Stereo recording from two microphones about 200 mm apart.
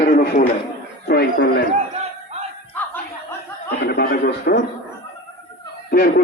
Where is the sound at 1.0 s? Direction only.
50° left (ahead or behind).